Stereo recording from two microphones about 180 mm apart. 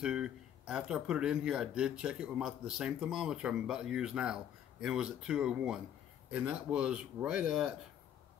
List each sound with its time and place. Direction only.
0.0 s speech: 5° right (ahead or behind)